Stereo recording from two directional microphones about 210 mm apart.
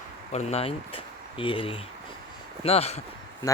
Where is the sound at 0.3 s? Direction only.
30° left (ahead or behind).